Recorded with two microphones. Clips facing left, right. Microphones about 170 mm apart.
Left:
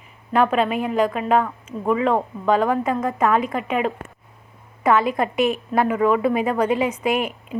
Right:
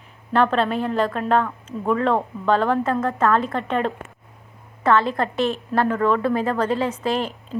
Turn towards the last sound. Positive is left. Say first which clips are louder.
# left 1 dB
turn(degrees=10)  # may be behind; listen again after turning